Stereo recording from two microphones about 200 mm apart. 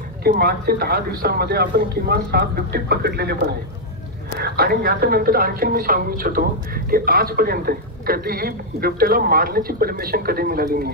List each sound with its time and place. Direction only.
0.2 s a woman's voice: 50° right (ahead or behind)
4.4 s a woman's voice: 50° right (ahead or behind)